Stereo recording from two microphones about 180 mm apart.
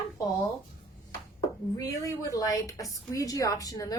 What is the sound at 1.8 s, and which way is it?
A woman's voice, 20° left (ahead or behind).